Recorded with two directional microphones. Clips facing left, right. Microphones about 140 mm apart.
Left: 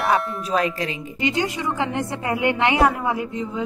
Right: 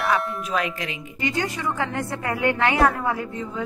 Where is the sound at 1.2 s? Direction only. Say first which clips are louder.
Left 3 dB; 20° left (ahead or behind).